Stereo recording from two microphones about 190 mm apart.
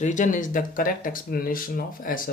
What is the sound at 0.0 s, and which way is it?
Speech, 40° left (ahead or behind).